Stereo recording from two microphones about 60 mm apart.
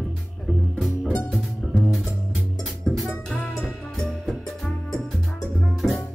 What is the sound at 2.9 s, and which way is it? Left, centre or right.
Music, centre.